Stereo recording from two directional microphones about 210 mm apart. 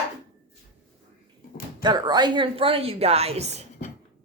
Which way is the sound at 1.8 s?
20° right (ahead or behind).